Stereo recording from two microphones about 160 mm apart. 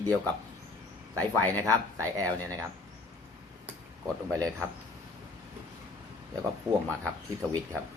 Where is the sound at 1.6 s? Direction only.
20° right (ahead or behind).